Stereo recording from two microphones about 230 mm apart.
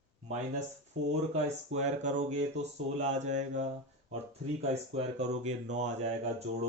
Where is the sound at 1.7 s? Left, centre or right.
Right.